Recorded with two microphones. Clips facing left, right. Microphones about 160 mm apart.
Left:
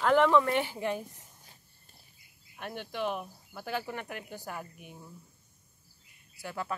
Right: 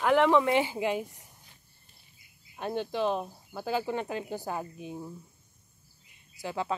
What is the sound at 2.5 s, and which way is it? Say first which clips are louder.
Speech: right 6 dB; 30° right (ahead or behind).